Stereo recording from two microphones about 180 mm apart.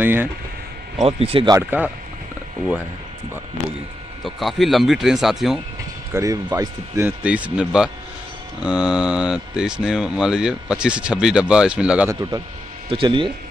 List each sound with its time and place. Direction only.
0.0 s speech: 10° right (ahead or behind)
1.0 s speech: 30° right (ahead or behind)
1.5 s speech: 10° right (ahead or behind)
4.2 s speech: centre (ahead or behind)
6.1 s speech: 20° right (ahead or behind)
12.1 s speech: 15° right (ahead or behind)
12.9 s speech: 30° right (ahead or behind)